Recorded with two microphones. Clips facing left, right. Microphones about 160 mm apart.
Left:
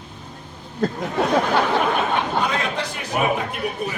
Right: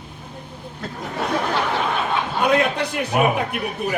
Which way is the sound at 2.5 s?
60° right (ahead or behind).